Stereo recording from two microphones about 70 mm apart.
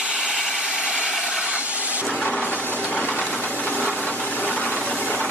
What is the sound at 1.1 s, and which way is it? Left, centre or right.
Vehicle, centre.